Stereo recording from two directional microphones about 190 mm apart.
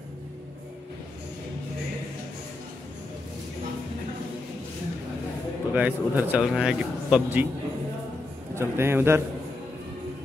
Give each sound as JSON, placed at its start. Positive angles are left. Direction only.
{"t": 5.7, "sound": "a man's voice", "side_deg": -5}
{"t": 8.5, "sound": "a man's voice", "side_deg": -15}